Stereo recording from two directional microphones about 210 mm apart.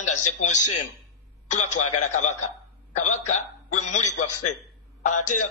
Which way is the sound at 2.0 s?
35° left (ahead or behind).